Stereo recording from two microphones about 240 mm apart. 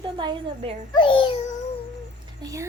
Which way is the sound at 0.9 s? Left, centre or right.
Left.